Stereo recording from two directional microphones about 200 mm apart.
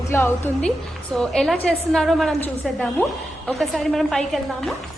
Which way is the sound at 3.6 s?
Centre (ahead or behind).